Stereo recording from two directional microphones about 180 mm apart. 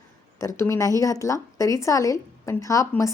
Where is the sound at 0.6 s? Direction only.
15° left (ahead or behind).